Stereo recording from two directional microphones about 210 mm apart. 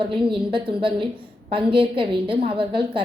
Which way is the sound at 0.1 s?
25° right (ahead or behind).